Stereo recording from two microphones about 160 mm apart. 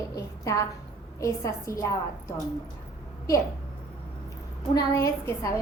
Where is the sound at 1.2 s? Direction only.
20° left (ahead or behind).